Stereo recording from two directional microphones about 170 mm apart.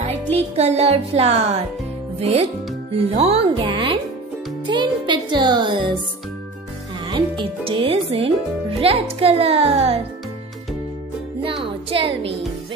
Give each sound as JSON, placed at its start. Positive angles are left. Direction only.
{"t": 0.0, "sound": "a child's voice", "side_deg": -40}
{"t": 4.6, "sound": "music", "side_deg": -25}
{"t": 7.1, "sound": "a child's voice", "side_deg": -30}
{"t": 11.4, "sound": "music", "side_deg": -30}